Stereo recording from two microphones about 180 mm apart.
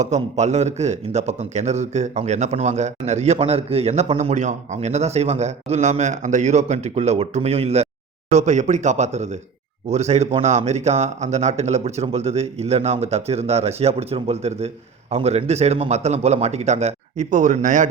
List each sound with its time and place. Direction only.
0.0 s a man's voice: 40° right (ahead or behind)